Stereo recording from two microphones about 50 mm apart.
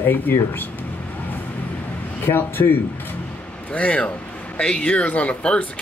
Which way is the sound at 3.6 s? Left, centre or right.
Left.